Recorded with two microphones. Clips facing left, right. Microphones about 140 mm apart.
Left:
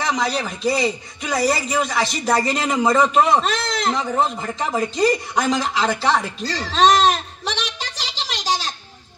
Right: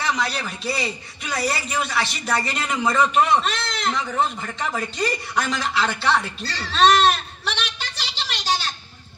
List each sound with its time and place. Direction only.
0.0 s a man's voice: 40° left (ahead or behind)
4.9 s music: 40° left (ahead or behind)